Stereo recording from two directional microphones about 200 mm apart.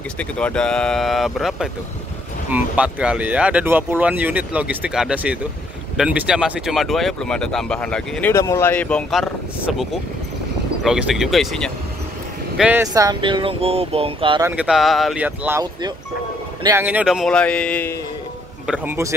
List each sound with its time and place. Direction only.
0.2 s speech: 5° left (ahead or behind)
10.8 s speech: centre (ahead or behind)
12.8 s speech: 15° right (ahead or behind)
14.4 s speech: 5° right (ahead or behind)
16.6 s speech: 10° right (ahead or behind); by 17.9 s 5° left (ahead or behind)
18.7 s speech: 10° right (ahead or behind)